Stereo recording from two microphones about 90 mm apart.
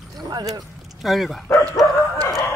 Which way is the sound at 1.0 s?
Centre (ahead or behind).